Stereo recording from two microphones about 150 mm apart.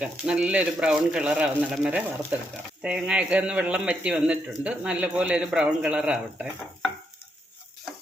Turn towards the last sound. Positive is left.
turn(degrees=-5)  # may be behind; listen again after turning